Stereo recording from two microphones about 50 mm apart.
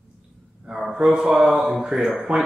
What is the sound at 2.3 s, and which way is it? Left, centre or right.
Speech, right.